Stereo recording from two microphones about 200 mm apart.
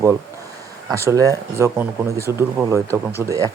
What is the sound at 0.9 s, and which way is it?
Speech, 15° right (ahead or behind).